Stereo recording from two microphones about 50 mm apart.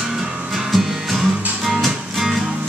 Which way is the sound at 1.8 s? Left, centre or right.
Centre.